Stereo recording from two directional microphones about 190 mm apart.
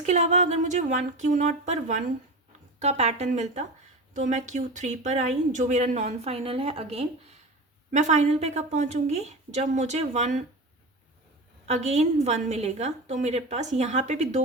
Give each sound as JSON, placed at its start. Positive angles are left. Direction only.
{"t": 0.0, "sound": "speech", "side_deg": -35}
{"t": 11.7, "sound": "speech", "side_deg": -35}